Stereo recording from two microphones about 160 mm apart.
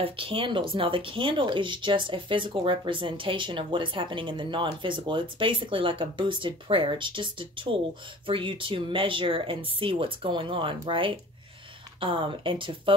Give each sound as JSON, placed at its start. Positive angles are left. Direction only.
{"t": 0.0, "sound": "speech", "side_deg": -35}